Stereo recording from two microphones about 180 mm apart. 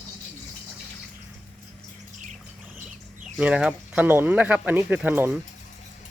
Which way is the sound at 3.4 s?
5° right (ahead or behind).